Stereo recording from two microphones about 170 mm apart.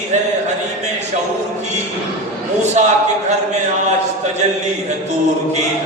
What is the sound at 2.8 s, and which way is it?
Speech, 45° right (ahead or behind).